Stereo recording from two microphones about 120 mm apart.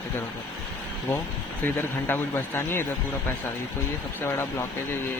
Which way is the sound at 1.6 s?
15° left (ahead or behind).